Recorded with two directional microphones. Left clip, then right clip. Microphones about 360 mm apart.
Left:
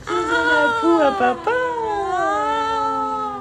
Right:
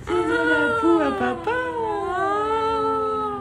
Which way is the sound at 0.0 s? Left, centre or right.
Centre.